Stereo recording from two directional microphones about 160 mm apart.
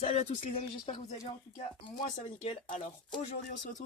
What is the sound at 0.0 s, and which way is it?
Speech, 45° left (ahead or behind).